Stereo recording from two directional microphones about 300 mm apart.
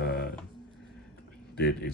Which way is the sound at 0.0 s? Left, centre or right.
Left.